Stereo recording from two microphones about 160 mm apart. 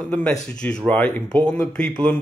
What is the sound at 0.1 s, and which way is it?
Speech, 5° left (ahead or behind).